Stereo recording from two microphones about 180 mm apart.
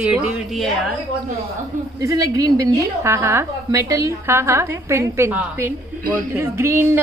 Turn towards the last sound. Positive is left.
turn(degrees=-15)  # may be behind; listen again after turning